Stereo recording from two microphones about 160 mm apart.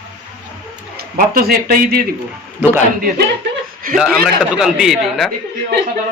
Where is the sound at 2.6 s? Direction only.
10° right (ahead or behind).